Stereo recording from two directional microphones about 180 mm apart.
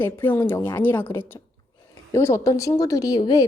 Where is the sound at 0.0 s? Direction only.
10° left (ahead or behind).